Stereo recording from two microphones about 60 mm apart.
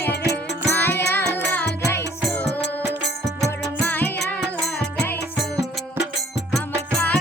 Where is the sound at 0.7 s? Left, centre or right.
Left.